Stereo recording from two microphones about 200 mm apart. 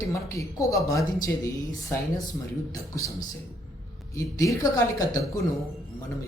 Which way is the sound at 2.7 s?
15° left (ahead or behind).